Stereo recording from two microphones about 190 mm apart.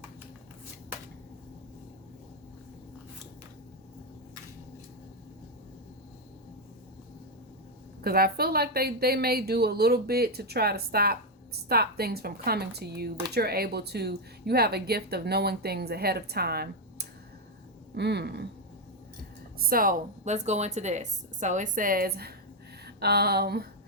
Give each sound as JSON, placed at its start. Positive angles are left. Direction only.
{"t": 8.0, "sound": "speech", "side_deg": -55}
{"t": 19.5, "sound": "speech", "side_deg": -50}